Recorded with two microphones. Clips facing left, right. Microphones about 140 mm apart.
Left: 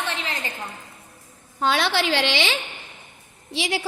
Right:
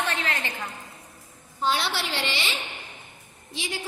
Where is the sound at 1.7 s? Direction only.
90° left.